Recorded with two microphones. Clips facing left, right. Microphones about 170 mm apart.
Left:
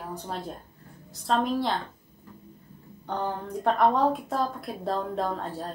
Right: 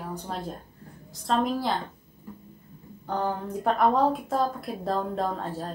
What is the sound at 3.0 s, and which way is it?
A woman's voice, centre (ahead or behind).